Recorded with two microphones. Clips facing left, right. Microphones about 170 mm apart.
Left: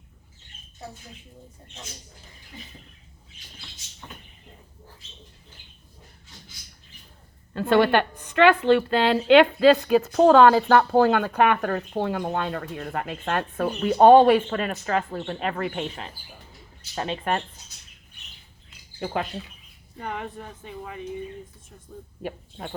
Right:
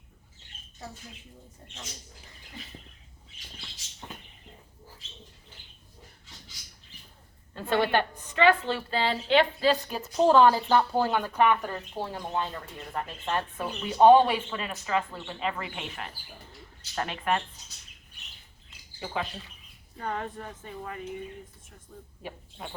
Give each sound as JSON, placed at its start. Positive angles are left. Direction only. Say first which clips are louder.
{"t": 7.5, "sound": "a woman's voice", "louder": "left 6 dB", "side_deg": 70}
{"t": 16.9, "sound": "speech", "louder": "left 4 dB", "side_deg": 20}
{"t": 18.9, "sound": "speech", "louder": "left 5 dB", "side_deg": 55}
{"t": 20.0, "sound": "speech", "louder": "left 1 dB", "side_deg": 15}